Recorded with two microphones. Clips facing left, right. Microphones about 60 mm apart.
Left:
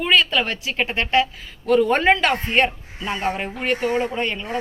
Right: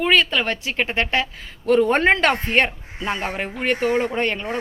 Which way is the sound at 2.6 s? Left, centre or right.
Right.